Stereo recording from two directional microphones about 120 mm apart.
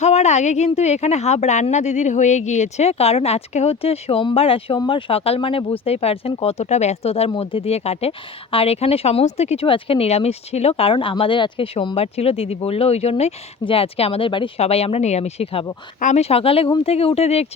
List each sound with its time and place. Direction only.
0.0 s speech: 70° left (ahead or behind)
9.6 s speech: 50° left (ahead or behind)
16.0 s speech: 90° left
16.3 s speech: 50° left (ahead or behind)